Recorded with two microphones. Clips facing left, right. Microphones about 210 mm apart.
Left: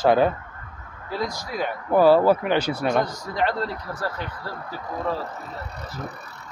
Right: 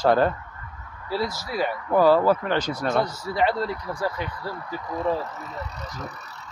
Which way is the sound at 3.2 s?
10° right (ahead or behind).